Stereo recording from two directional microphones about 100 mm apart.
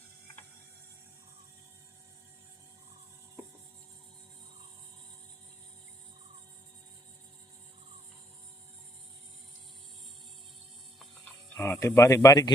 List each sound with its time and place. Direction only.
11.5 s speech: 25° left (ahead or behind)